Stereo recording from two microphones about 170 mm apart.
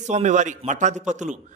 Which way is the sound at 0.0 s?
45° right (ahead or behind).